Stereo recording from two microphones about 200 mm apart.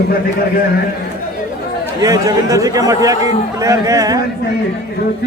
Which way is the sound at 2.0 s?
20° right (ahead or behind).